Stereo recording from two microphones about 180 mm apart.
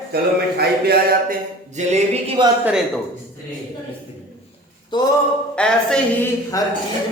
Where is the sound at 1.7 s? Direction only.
40° right (ahead or behind).